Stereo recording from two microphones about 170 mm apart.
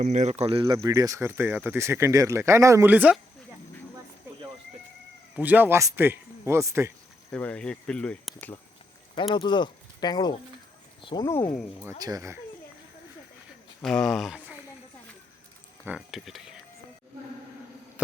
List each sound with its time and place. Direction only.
0.0 s speech: 45° right (ahead or behind); by 3.2 s 10° right (ahead or behind)
5.4 s speech: 10° right (ahead or behind)
7.3 s speech: 5° left (ahead or behind)
9.3 s speech: 25° left (ahead or behind)
11.9 s speech: 20° right (ahead or behind)
13.8 s speech: 5° left (ahead or behind)
16.0 s speech: centre (ahead or behind)